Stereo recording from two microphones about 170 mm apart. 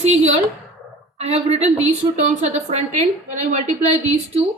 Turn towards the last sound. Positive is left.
turn(degrees=-40)  # may be behind; listen again after turning